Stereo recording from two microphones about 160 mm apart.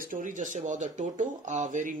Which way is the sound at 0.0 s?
55° right (ahead or behind).